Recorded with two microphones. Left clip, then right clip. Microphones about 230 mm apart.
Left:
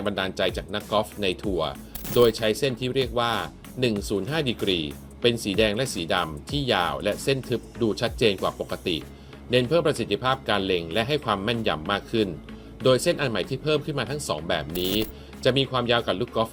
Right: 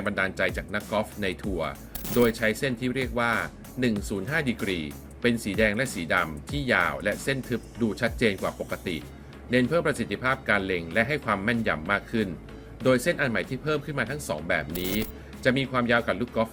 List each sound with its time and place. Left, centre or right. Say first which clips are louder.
0.0 s speech: left 1 dB; centre